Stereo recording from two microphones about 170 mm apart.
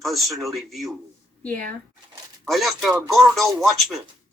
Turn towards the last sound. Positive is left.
turn(degrees=0)  # may be behind; listen again after turning